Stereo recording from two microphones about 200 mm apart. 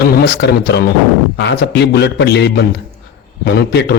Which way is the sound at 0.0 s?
55° left (ahead or behind).